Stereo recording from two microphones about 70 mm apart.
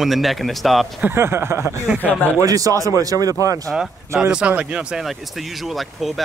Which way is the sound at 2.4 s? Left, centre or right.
Right.